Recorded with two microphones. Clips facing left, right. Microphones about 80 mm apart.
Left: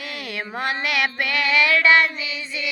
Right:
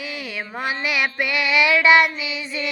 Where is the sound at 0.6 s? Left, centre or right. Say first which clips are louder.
Even; centre.